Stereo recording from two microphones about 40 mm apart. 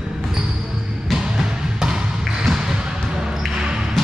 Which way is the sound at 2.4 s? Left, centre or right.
Centre.